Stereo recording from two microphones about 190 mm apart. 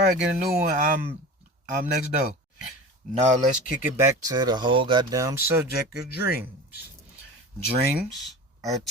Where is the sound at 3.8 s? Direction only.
15° right (ahead or behind).